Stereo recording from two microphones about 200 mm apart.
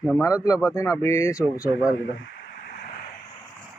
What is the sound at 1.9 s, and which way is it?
Speech, 75° left (ahead or behind).